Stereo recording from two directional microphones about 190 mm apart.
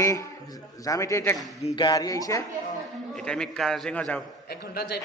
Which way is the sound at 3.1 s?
5° left (ahead or behind).